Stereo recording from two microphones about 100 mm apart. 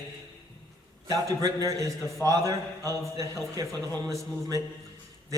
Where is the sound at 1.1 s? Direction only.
35° right (ahead or behind).